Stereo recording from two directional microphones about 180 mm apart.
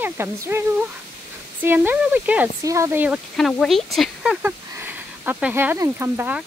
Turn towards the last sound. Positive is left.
turn(degrees=-10)  # may be behind; listen again after turning